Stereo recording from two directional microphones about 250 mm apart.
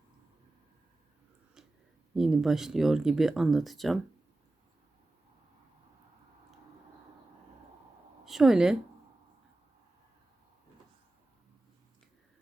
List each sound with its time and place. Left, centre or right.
2.1 s speech: centre
8.2 s a woman's voice: centre